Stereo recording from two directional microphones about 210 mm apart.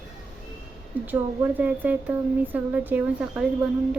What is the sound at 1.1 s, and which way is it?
Speech, 10° right (ahead or behind).